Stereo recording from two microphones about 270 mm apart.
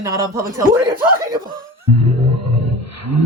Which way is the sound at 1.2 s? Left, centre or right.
Centre.